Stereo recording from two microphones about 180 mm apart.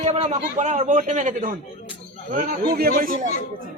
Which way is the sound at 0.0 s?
35° right (ahead or behind).